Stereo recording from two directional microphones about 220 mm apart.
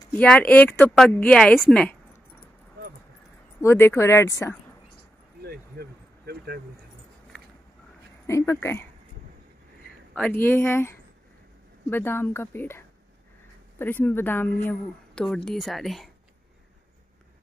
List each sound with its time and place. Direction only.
0.2 s a woman's voice: 5° left (ahead or behind)
3.6 s speech: 10° left (ahead or behind)
5.4 s vehicle: 45° right (ahead or behind)
8.3 s speech: 15° left (ahead or behind)
10.1 s a woman's voice: 5° left (ahead or behind)